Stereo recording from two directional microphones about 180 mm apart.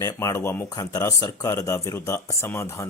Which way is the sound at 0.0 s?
15° left (ahead or behind).